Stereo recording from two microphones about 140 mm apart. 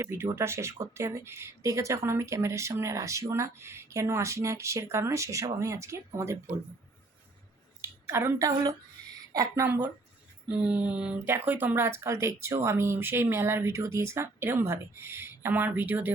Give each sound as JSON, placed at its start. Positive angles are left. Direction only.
{"t": 0.0, "sound": "speech", "side_deg": -15}
{"t": 7.8, "sound": "speech", "side_deg": -15}
{"t": 9.6, "sound": "speech", "side_deg": -15}